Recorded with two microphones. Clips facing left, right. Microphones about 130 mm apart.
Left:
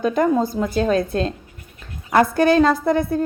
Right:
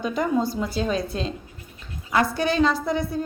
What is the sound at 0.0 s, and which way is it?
A woman's voice, 50° left (ahead or behind).